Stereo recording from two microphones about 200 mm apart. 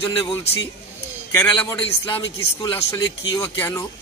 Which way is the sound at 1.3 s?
10° left (ahead or behind).